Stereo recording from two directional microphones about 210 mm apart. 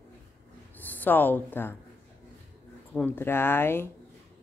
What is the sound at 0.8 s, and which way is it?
Speech, 10° left (ahead or behind).